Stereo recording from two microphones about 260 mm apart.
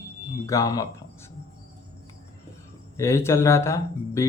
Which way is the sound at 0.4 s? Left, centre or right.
Centre.